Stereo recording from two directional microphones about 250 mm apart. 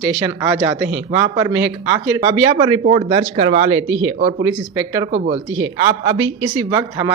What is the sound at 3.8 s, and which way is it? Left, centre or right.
Speech, right.